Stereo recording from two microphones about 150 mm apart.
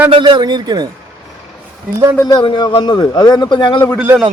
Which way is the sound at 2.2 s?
30° left (ahead or behind).